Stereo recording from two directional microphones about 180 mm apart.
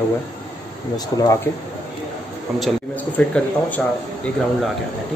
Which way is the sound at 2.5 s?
5° left (ahead or behind).